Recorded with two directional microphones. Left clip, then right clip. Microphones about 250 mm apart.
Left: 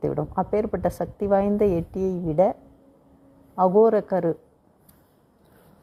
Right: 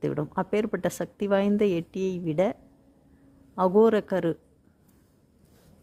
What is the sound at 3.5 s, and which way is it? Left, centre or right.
Speech, right.